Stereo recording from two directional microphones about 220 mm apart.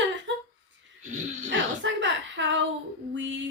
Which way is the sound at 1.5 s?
55° right (ahead or behind).